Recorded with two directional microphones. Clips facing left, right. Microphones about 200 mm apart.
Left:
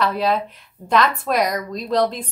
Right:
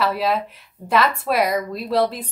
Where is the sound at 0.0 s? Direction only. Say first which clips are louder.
Left 1 dB; 5° right (ahead or behind).